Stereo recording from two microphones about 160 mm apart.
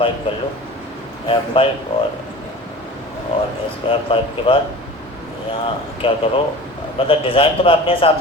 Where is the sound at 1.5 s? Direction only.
35° left (ahead or behind).